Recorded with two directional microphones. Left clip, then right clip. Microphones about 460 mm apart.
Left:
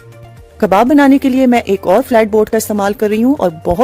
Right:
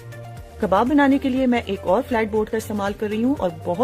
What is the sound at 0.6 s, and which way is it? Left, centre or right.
Speech, left.